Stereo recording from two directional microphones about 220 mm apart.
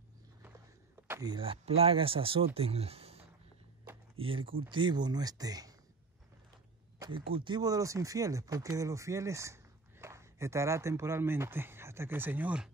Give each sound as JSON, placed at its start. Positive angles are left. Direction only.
{"t": 1.0, "sound": "speech", "side_deg": -15}
{"t": 3.9, "sound": "a sound", "side_deg": -10}
{"t": 4.2, "sound": "speech", "side_deg": -25}
{"t": 7.0, "sound": "speech", "side_deg": -25}